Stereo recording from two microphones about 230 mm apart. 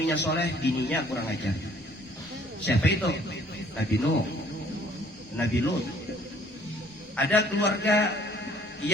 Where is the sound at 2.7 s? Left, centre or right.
Left.